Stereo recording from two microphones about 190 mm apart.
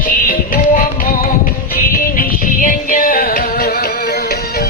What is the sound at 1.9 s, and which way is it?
Music, 45° left (ahead or behind).